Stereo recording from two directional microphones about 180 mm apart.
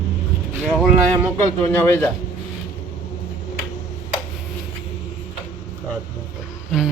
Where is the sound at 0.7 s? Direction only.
Centre (ahead or behind).